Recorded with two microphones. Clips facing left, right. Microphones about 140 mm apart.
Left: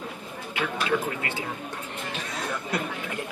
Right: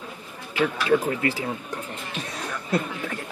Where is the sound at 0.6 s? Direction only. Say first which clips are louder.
Right 5 dB; 35° right (ahead or behind).